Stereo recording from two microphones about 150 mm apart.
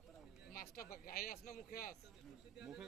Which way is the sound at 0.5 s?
80° left.